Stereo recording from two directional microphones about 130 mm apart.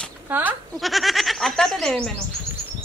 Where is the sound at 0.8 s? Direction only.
Centre (ahead or behind).